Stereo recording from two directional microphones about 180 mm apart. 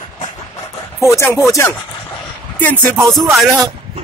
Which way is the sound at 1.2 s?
15° left (ahead or behind).